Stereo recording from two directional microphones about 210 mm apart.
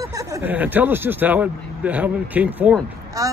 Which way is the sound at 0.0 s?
15° right (ahead or behind).